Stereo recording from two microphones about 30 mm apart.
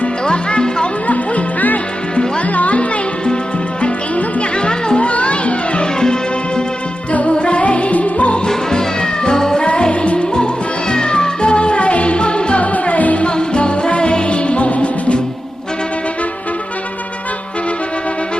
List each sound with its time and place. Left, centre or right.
0.3 s music: left
1.0 s music: left
4.9 s children playing: left
7.1 s music: left
8.4 s music: left
9.6 s music: left
12.8 s music: left
13.2 s music: left